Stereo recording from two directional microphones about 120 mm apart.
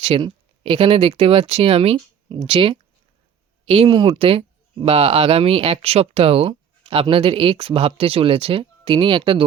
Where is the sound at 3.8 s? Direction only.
40° right (ahead or behind).